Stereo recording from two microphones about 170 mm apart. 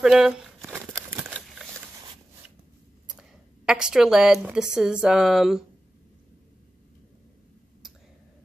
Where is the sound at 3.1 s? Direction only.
5° right (ahead or behind).